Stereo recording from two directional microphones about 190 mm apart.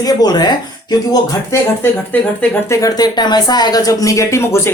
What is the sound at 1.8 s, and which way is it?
Speech, 10° left (ahead or behind).